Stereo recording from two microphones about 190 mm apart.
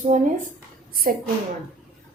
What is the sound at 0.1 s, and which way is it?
Speech, 40° right (ahead or behind).